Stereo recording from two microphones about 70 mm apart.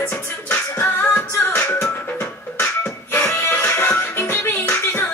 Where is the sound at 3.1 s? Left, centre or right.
Left.